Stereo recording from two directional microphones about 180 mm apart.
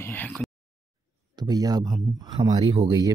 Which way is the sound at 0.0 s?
10° left (ahead or behind).